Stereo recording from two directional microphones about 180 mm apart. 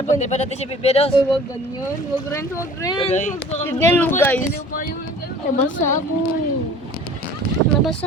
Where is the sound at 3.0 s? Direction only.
40° left (ahead or behind).